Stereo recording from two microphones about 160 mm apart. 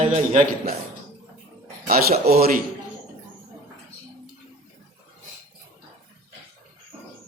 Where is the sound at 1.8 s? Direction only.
70° right (ahead or behind).